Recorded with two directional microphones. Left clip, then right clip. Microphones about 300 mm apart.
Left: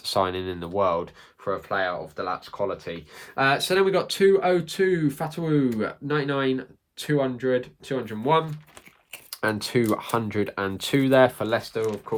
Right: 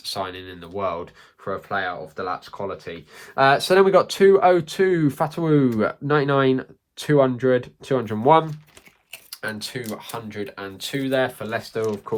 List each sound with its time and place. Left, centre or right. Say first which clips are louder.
0.1 s speech: left 5 dB; centre
3.4 s speech: right 5 dB; centre
9.4 s speech: left 6 dB; centre